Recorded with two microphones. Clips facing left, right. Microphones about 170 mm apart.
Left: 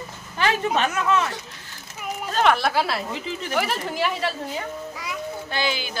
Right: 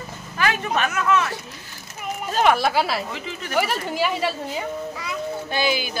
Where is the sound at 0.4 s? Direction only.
30° left (ahead or behind).